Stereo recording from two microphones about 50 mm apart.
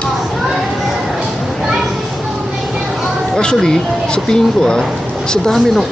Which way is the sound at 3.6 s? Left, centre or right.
Centre.